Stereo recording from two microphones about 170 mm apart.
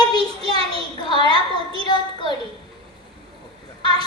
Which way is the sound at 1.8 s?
25° left (ahead or behind).